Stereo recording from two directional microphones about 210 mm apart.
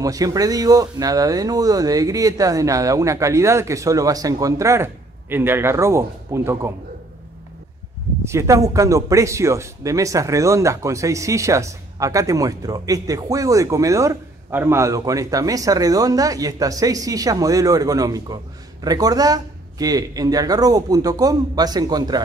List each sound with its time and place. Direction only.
0.0 s speech: 15° right (ahead or behind)
8.2 s speech: 15° right (ahead or behind)